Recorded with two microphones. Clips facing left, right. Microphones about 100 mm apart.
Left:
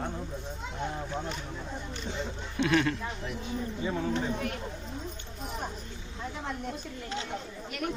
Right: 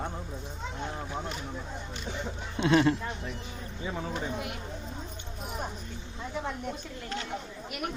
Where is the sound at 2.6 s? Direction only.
25° right (ahead or behind).